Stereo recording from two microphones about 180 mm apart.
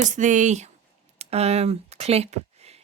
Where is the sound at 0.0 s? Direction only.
45° right (ahead or behind).